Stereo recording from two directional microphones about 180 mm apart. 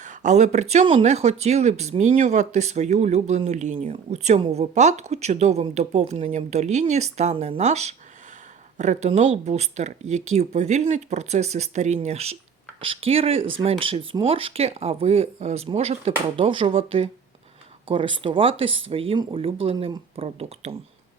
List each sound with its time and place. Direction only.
0.0 s speech: 40° right (ahead or behind)